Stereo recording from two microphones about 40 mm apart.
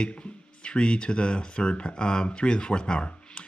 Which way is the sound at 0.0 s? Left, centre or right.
Left.